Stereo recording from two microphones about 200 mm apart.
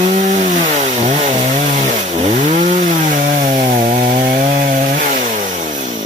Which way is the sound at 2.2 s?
40° right (ahead or behind).